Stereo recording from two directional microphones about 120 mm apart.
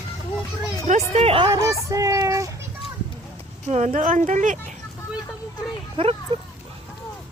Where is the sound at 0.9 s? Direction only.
70° right (ahead or behind).